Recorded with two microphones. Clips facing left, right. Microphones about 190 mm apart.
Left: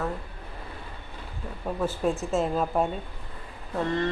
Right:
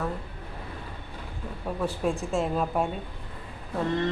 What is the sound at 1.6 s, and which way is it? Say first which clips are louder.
Speech: left 1 dB; centre (ahead or behind).